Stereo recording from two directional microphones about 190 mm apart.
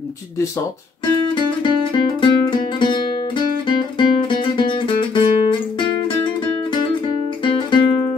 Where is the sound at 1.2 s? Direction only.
25° left (ahead or behind).